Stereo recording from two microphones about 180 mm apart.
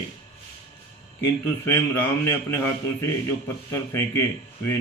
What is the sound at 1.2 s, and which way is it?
Speech, 15° left (ahead or behind).